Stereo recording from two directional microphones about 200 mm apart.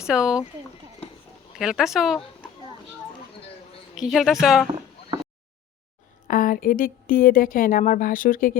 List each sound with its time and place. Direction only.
0.1 s speech: 5° right (ahead or behind)
1.5 s speech: centre (ahead or behind)
3.9 s speech: centre (ahead or behind)
6.2 s speech: 45° left (ahead or behind)